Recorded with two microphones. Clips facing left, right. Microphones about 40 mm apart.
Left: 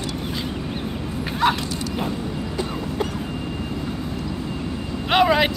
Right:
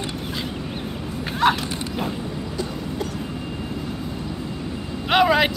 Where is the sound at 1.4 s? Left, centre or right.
Centre.